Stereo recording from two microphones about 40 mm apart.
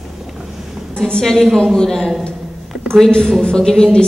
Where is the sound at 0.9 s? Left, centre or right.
Centre.